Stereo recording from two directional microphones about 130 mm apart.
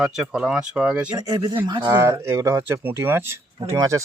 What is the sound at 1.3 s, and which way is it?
Speech, 35° right (ahead or behind).